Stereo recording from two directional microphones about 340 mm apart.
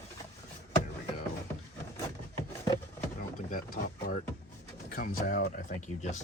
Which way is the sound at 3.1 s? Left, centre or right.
Left.